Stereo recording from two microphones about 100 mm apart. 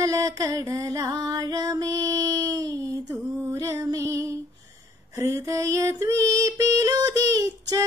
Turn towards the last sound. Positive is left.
turn(degrees=-35)  # may be behind; listen again after turning